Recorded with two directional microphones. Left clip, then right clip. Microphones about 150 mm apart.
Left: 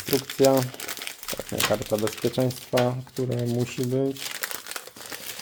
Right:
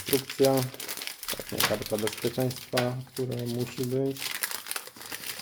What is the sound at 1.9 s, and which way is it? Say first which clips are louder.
Speech: left 5 dB; 60° left (ahead or behind).